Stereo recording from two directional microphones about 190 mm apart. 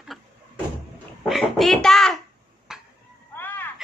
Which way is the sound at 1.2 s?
Centre (ahead or behind).